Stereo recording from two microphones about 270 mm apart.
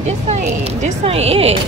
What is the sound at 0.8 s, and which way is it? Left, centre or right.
Speech, right.